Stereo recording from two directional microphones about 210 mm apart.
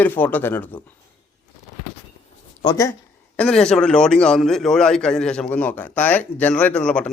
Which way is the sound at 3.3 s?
5° left (ahead or behind).